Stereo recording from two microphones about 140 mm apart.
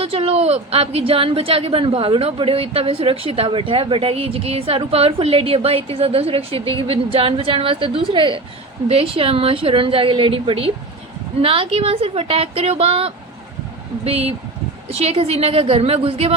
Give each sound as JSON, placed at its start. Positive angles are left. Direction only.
{"t": 0.0, "sound": "a woman's voice", "side_deg": -45}